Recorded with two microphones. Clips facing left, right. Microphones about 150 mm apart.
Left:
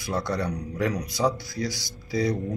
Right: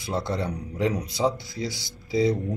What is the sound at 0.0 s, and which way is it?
Speech, 25° right (ahead or behind).